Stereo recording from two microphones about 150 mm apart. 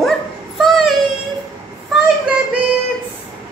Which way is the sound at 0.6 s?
Centre (ahead or behind).